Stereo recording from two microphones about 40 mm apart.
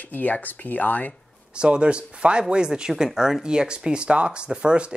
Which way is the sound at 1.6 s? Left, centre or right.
Right.